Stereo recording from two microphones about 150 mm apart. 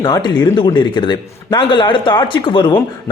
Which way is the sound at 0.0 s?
30° left (ahead or behind).